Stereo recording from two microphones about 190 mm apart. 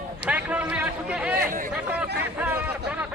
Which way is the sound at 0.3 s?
5° right (ahead or behind).